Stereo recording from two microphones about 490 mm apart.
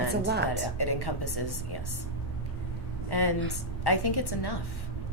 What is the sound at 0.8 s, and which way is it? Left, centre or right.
A woman's voice, left.